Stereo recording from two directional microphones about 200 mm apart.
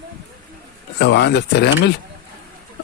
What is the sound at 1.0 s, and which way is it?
Speech, 60° left (ahead or behind).